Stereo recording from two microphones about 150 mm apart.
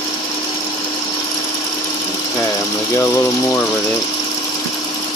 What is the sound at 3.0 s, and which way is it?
Speech, 20° left (ahead or behind).